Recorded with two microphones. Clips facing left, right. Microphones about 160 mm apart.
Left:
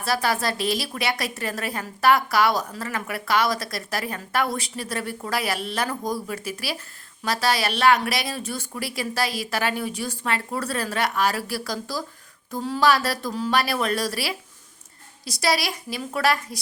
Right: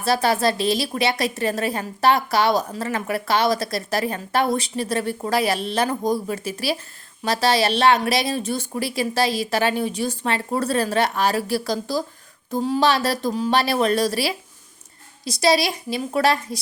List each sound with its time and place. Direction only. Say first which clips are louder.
0.0 s a woman's voice: right 5 dB; 25° right (ahead or behind)